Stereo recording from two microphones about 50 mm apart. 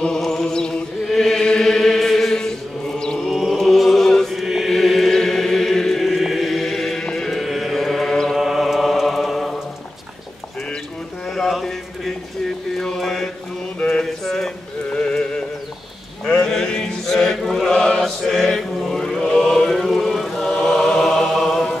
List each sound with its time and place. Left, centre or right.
0.2 s chant: centre
3.3 s chant: centre
4.4 s chant: centre
7.1 s a sound: centre
7.3 s chant: centre
8.4 s mantra: centre
11.3 s a sound: centre
12.7 s mantra: centre
13.7 s mantra: left
14.0 s a sound: centre
14.9 s a sound: centre
16.3 s mantra: centre
18.0 s chant: centre